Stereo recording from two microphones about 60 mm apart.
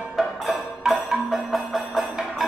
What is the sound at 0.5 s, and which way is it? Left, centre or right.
Music, centre.